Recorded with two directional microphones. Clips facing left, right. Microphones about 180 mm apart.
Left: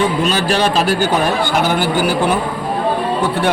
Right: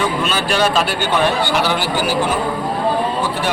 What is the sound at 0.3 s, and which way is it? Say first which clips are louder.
Speech: left 2 dB; 35° left (ahead or behind).